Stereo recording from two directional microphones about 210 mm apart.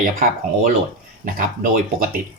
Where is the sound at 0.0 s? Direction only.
40° right (ahead or behind).